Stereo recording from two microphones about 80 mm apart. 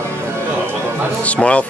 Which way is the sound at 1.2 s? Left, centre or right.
Centre.